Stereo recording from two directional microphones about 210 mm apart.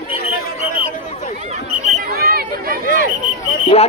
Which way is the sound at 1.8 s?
40° right (ahead or behind).